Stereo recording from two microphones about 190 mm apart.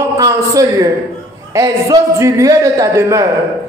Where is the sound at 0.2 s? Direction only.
15° right (ahead or behind).